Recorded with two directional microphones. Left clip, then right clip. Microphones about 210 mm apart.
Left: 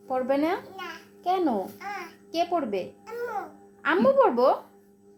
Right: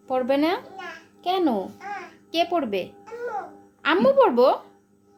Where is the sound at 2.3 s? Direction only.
20° right (ahead or behind).